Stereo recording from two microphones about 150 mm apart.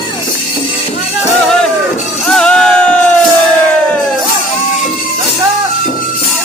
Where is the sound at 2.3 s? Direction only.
5° left (ahead or behind).